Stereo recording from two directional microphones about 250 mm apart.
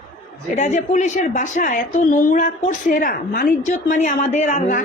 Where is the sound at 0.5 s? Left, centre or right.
Left.